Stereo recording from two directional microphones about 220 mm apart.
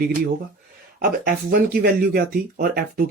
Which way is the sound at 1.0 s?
40° right (ahead or behind).